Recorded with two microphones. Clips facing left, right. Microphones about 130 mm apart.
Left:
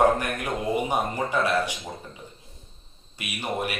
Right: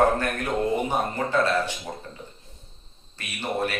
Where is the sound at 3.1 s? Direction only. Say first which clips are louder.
Right 1 dB; 10° left (ahead or behind).